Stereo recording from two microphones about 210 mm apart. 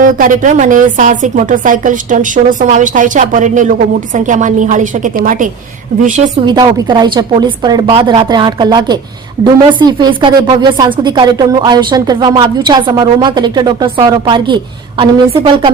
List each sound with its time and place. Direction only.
0.0 s a woman's voice: 40° right (ahead or behind)
6.4 s speech: 20° right (ahead or behind)